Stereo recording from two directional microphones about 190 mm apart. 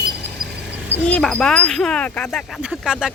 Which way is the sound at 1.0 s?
5° left (ahead or behind).